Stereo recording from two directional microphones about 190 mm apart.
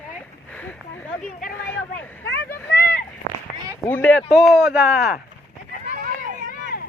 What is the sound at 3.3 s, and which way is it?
Run, 50° right (ahead or behind).